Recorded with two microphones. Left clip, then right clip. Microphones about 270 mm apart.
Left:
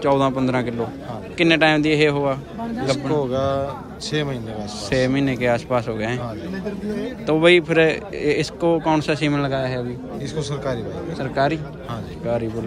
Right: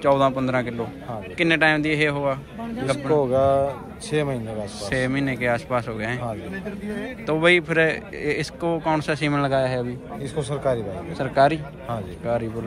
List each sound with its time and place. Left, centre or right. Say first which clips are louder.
0.0 s speech: even; centre
3.2 s speech: right 3 dB; centre
4.8 s speech: left 4 dB; centre
7.2 s speech: left 3 dB; centre
10.3 s speech: right 2 dB; centre
11.1 s speech: right 3 dB; centre